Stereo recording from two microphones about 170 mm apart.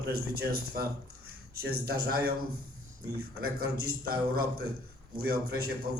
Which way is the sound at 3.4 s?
65° right (ahead or behind).